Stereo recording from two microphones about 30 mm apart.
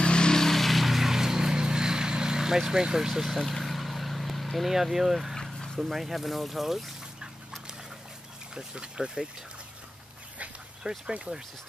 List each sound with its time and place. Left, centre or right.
0.0 s vehicle: left
0.3 s vehicle: centre
0.6 s vehicle: centre
1.1 s vehicle: centre
3.2 s vehicle: centre
4.6 s speech: centre
8.5 s speech: right
10.8 s speech: right